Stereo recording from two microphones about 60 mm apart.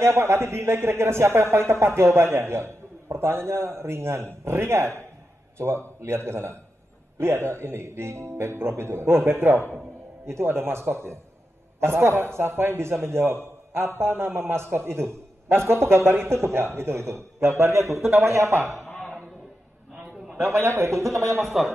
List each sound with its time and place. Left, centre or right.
0.0 s a man's voice: right
18.9 s a sound: centre
20.3 s a man's voice: right
21.4 s speech: centre